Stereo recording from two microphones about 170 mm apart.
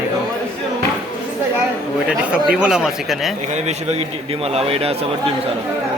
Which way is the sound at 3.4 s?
40° right (ahead or behind).